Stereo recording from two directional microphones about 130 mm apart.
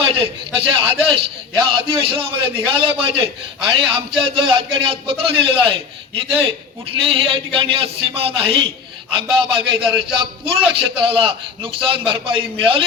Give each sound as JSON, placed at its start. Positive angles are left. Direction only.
{"t": 0.0, "sound": "a man's voice", "side_deg": -45}
{"t": 7.0, "sound": "a man's voice", "side_deg": -45}